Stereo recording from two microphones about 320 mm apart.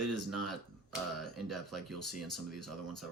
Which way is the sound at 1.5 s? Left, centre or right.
Centre.